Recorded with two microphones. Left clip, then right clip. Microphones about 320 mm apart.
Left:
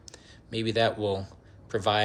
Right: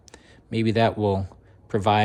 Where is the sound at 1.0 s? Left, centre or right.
Centre.